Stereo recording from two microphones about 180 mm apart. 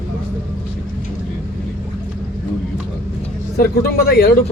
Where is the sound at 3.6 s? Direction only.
60° left (ahead or behind).